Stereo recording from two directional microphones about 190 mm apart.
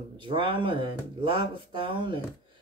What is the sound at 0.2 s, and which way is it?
Speech, 25° right (ahead or behind).